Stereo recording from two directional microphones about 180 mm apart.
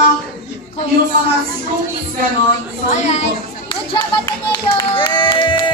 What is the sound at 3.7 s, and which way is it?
Clapping, 25° left (ahead or behind).